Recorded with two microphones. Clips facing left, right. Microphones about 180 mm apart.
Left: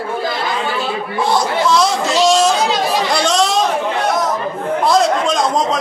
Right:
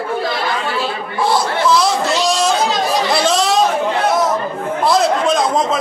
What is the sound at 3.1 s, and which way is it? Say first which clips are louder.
Chatter: even; 5° right (ahead or behind).